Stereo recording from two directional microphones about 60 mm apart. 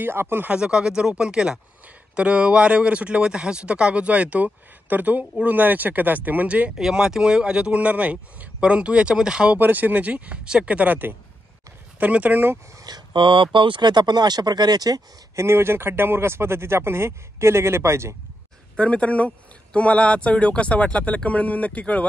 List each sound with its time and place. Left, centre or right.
0.0 s speech: right
0.5 s a man's voice: centre
6.8 s a man's voice: centre
9.6 s speech: right
12.7 s a sound: right
14.5 s speech: right
15.3 s speech: right
18.8 s speech: left